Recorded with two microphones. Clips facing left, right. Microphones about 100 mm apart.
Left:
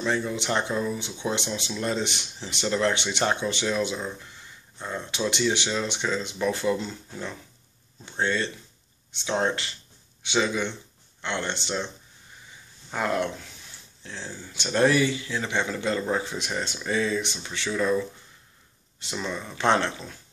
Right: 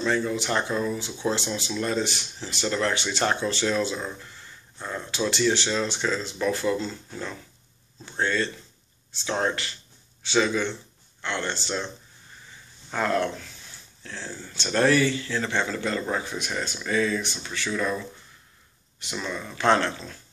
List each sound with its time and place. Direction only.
0.0 s speech: 20° left (ahead or behind)
12.9 s speech: 15° left (ahead or behind)
19.1 s speech: 25° left (ahead or behind)